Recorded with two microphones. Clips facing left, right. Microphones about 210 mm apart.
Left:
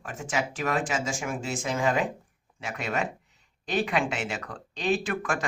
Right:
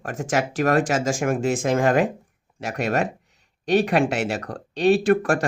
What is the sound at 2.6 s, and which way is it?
Speech, 70° right (ahead or behind).